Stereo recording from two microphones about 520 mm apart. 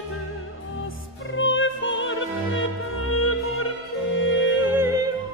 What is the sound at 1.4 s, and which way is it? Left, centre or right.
Opera, left.